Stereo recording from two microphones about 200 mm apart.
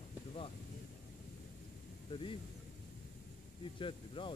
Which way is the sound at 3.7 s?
25° left (ahead or behind).